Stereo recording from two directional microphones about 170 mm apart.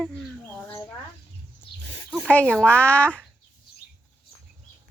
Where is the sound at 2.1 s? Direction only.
5° left (ahead or behind).